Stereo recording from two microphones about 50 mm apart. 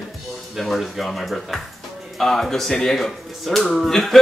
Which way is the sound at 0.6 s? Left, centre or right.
Centre.